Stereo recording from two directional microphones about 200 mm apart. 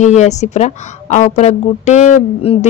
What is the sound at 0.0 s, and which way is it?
Speech, 35° left (ahead or behind).